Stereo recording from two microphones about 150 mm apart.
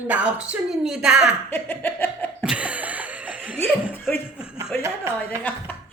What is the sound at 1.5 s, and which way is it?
Laughter, 15° left (ahead or behind).